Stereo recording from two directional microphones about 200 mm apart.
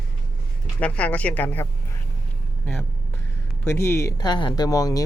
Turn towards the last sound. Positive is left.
turn(degrees=15)  # may be behind; listen again after turning